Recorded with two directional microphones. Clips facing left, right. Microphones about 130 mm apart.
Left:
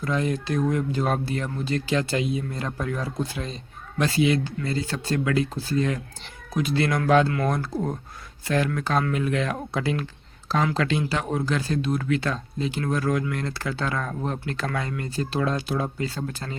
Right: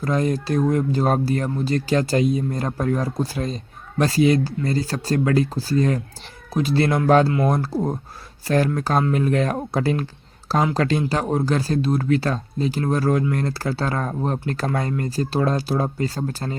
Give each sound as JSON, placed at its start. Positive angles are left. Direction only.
{"t": 0.0, "sound": "speech", "side_deg": -40}